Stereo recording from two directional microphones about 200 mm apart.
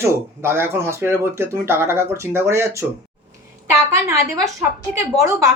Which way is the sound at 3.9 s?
15° right (ahead or behind).